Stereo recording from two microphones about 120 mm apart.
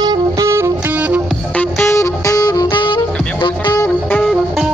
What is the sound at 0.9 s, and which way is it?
Music, 10° right (ahead or behind).